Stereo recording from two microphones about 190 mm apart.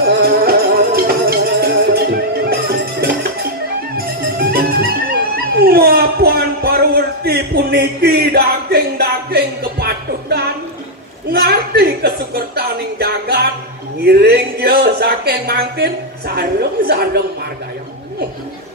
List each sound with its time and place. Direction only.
0.0 s music: 55° right (ahead or behind)
5.6 s a sound: 55° right (ahead or behind)
11.3 s music: 55° right (ahead or behind)
14.0 s speech: 55° right (ahead or behind)